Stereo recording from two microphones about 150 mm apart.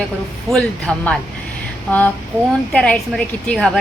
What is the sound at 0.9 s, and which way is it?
Speech, 5° left (ahead or behind).